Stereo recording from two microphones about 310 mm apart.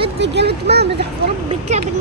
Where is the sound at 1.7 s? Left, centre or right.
Right.